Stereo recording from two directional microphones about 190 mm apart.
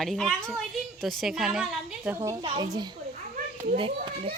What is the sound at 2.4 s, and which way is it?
Speech, 25° right (ahead or behind).